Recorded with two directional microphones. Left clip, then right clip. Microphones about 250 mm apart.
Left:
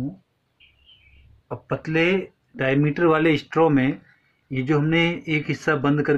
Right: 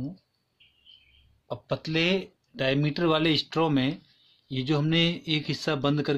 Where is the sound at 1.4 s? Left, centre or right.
Right.